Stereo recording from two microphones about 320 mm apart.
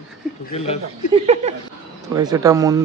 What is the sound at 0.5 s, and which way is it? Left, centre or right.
Speech, centre.